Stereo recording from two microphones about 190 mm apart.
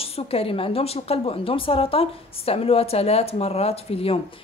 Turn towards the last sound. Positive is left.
turn(degrees=30)  # may be behind; listen again after turning